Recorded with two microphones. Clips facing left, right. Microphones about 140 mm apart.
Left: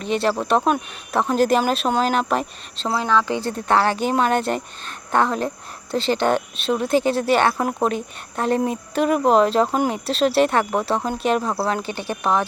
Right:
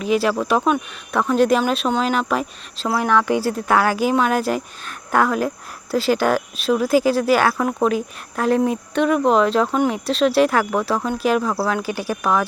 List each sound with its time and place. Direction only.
0.0 s speech: 5° right (ahead or behind)
0.7 s speech: 30° left (ahead or behind)
1.4 s speech: centre (ahead or behind)
3.0 s speech: 15° right (ahead or behind)
12.2 s speech: 25° left (ahead or behind)